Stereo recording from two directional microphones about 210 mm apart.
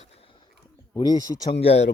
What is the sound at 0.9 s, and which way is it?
Speech, 15° left (ahead or behind).